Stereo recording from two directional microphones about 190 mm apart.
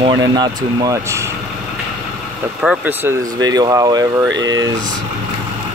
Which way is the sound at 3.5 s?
20° right (ahead or behind).